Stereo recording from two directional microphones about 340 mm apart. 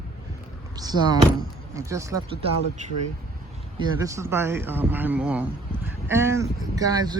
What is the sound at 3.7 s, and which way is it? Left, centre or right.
Speech, centre.